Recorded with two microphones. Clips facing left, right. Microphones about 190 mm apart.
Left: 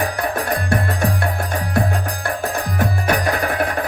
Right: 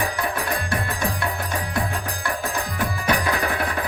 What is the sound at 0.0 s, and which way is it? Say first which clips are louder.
Music: left 4 dB; 45° left (ahead or behind).